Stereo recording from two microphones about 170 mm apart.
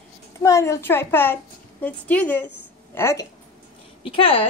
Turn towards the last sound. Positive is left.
turn(degrees=35)  # may be behind; listen again after turning